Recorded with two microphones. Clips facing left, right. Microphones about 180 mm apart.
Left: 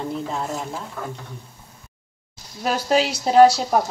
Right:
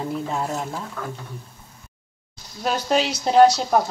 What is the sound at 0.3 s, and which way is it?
Speech, 5° right (ahead or behind).